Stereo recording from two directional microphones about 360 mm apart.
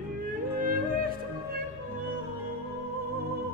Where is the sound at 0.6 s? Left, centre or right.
Right.